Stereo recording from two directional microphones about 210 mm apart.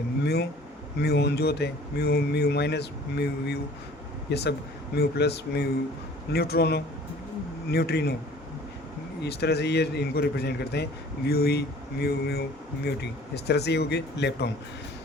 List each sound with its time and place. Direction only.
1.0 s speech: 50° left (ahead or behind)
9.2 s speech: 50° left (ahead or behind)